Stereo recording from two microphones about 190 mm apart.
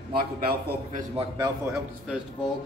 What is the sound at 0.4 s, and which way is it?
Speech, 55° right (ahead or behind).